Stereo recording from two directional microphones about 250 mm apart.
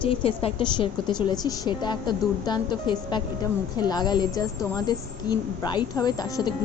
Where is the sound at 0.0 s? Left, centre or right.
Left.